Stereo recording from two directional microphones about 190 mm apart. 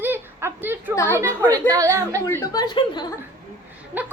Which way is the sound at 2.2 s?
15° left (ahead or behind).